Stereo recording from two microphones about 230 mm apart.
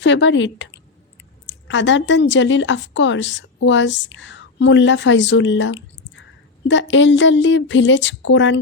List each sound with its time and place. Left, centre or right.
0.0 s a woman's voice: left